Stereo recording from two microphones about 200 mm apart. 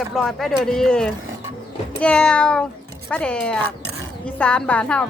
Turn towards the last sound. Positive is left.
turn(degrees=5)  # may be behind; listen again after turning